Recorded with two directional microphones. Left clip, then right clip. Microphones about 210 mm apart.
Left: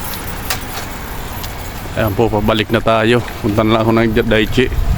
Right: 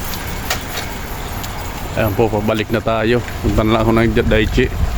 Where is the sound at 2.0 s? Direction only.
20° left (ahead or behind).